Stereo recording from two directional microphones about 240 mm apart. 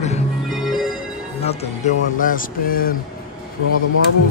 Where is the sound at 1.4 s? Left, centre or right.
Left.